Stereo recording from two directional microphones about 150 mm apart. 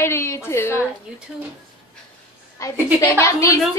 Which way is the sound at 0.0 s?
20° left (ahead or behind).